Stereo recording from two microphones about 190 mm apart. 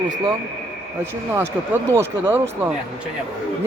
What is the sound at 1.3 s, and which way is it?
A man's voice, 15° right (ahead or behind).